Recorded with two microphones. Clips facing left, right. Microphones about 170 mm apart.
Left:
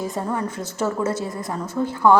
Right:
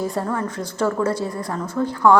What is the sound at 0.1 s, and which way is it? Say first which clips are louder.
Speech: right 1 dB; 15° left (ahead or behind).